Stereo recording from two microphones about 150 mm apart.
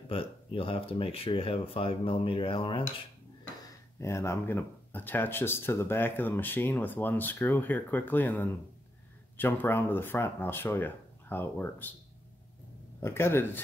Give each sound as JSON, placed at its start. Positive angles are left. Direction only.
{"t": 0.1, "sound": "speech", "side_deg": 35}
{"t": 4.0, "sound": "speech", "side_deg": 20}
{"t": 13.0, "sound": "speech", "side_deg": 15}